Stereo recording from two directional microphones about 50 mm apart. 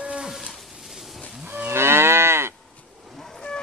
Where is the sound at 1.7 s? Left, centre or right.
Right.